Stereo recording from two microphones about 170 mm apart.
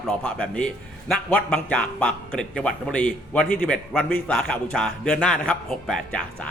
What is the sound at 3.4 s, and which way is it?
Speech, 60° left (ahead or behind).